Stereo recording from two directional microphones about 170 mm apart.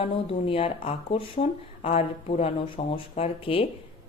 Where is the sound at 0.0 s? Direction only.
35° left (ahead or behind).